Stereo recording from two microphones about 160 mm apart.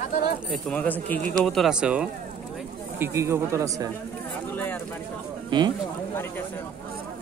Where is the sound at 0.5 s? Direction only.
5° left (ahead or behind); by 3.9 s 20° right (ahead or behind).